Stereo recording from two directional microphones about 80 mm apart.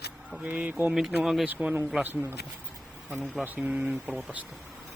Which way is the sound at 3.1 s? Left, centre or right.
Centre.